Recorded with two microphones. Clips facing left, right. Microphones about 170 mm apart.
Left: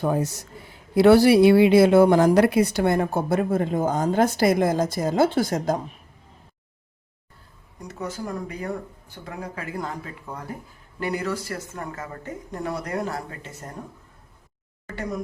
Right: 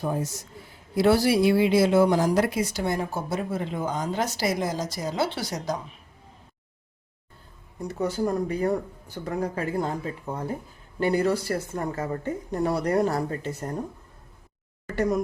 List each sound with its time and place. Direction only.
0.0 s speech: 70° left (ahead or behind); by 5.8 s 50° left (ahead or behind)
7.9 s a woman's voice: 35° right (ahead or behind)